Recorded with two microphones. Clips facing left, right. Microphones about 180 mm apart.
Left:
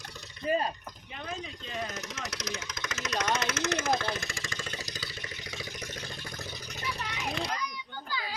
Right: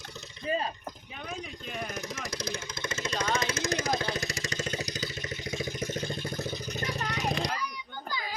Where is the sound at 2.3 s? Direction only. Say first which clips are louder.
Right 2 dB; 30° right (ahead or behind).